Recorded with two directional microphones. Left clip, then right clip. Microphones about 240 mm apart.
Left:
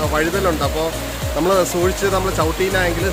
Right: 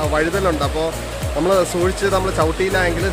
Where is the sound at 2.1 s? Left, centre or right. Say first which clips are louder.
Right 1 dB; centre.